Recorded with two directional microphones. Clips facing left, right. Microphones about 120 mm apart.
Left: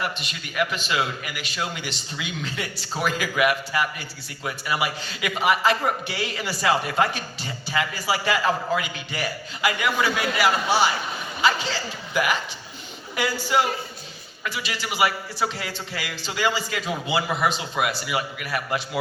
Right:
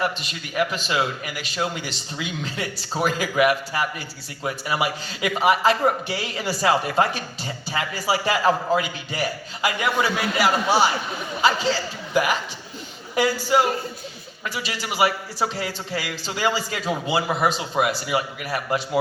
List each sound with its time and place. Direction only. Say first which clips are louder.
0.3 s a man's voice: right 2 dB; 30° right (ahead or behind)